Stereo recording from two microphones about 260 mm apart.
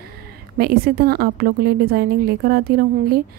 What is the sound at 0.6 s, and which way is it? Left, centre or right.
A woman's voice, right.